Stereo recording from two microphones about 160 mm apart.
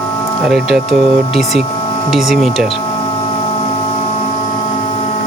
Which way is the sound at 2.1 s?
Centre (ahead or behind).